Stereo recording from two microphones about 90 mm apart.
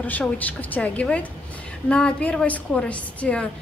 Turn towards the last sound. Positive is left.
turn(degrees=15)  # may be behind; listen again after turning